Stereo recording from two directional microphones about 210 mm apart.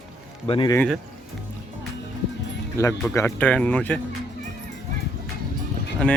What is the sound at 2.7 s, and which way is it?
Speech, 15° left (ahead or behind).